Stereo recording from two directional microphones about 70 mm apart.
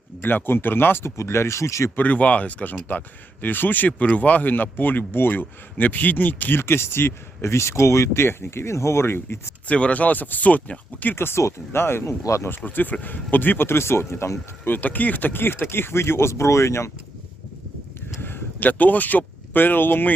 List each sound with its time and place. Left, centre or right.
0.2 s speech: left
2.0 s speech: left
9.6 s speech: centre
11.1 s speech: left
12.0 s speech: left
12.5 s speech: left
18.2 s speech: left